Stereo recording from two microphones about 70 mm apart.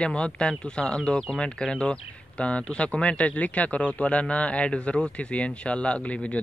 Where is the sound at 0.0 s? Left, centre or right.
Centre.